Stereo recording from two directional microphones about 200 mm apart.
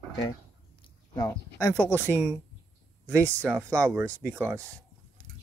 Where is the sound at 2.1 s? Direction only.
10° right (ahead or behind).